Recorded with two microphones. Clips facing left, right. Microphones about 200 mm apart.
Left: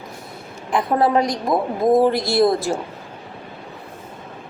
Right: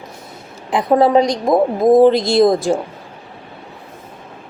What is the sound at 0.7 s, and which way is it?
A woman's voice, 20° right (ahead or behind).